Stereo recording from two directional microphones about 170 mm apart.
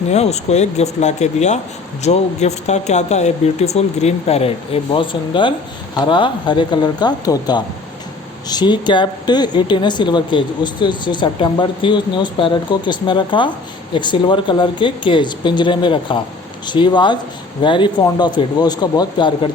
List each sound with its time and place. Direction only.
0.1 s a woman's voice: 40° left (ahead or behind)